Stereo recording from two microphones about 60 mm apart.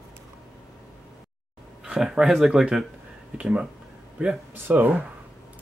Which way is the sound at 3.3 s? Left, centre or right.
Centre.